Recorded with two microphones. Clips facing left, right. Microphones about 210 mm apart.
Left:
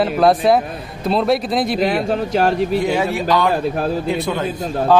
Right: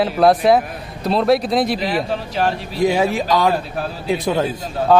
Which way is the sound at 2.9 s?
20° right (ahead or behind).